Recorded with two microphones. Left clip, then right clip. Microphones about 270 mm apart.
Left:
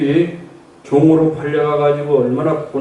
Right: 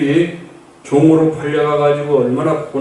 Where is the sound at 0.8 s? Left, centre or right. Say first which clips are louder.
Right 1 dB; left.